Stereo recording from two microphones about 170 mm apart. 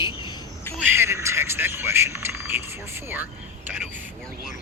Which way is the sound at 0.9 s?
15° right (ahead or behind).